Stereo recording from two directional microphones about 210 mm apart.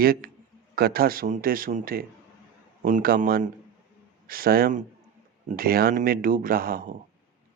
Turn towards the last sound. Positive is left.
turn(degrees=-45)  # may be behind; listen again after turning